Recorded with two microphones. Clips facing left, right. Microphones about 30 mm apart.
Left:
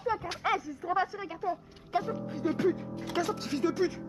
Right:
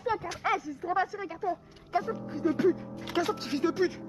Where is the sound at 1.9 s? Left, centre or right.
Centre.